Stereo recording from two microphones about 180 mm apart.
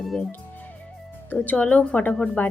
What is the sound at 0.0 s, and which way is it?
Speech, centre (ahead or behind).